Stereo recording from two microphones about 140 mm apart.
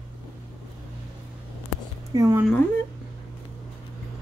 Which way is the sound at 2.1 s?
25° right (ahead or behind).